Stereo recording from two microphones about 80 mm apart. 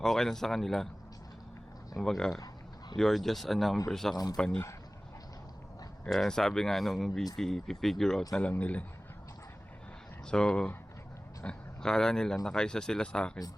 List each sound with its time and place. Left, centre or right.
0.0 s speech: centre
2.0 s speech: centre
6.1 s speech: centre
8.4 s speech: centre
10.2 s speech: centre